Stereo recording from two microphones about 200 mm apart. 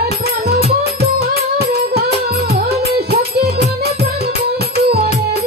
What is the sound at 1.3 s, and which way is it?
Music, 55° right (ahead or behind).